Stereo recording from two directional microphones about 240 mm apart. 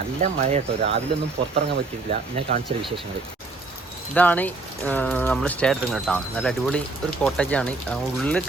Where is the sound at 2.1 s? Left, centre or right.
Right.